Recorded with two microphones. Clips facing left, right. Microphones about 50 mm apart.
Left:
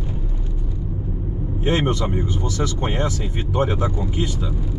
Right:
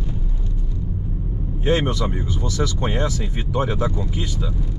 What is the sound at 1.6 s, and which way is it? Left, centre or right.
A man's voice, centre.